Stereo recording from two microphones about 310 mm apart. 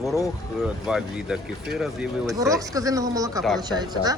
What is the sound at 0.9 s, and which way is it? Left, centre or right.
Speech, centre.